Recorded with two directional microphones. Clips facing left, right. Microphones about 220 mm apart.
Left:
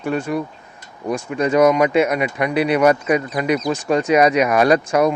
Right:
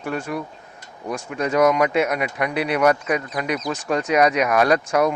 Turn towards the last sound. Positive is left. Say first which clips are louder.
# left 3 dB
turn(degrees=0)  # may be behind; listen again after turning